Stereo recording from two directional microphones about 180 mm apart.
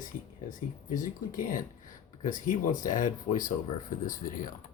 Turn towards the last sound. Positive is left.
turn(degrees=50)  # may be behind; listen again after turning